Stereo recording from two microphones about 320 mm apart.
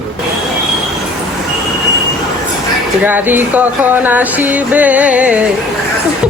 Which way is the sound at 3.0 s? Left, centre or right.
Centre.